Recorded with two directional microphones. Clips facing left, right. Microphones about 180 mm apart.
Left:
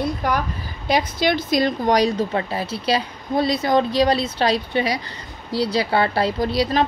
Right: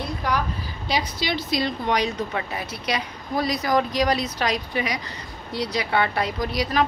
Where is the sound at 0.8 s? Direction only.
50° left (ahead or behind).